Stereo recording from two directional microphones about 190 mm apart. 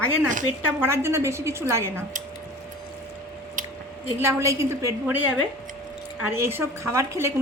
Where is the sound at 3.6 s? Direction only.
45° right (ahead or behind).